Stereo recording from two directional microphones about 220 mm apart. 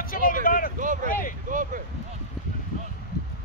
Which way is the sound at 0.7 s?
35° right (ahead or behind).